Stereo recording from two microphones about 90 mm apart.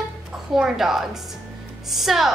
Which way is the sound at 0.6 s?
5° right (ahead or behind).